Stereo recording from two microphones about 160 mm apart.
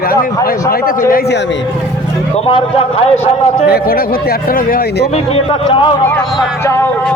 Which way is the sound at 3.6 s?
75° left (ahead or behind).